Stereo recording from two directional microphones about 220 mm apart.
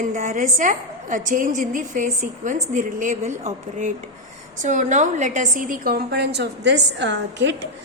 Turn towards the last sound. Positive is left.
turn(degrees=-55)  # may be behind; listen again after turning